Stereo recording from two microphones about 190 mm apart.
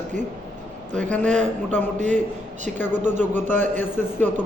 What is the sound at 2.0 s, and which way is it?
Speech, 40° right (ahead or behind).